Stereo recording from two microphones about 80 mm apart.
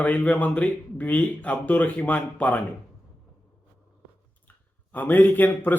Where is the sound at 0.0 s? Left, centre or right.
Centre.